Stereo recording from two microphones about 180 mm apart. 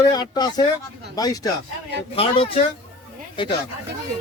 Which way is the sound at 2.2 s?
30° left (ahead or behind).